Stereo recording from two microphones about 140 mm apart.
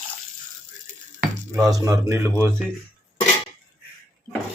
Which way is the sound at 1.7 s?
25° right (ahead or behind).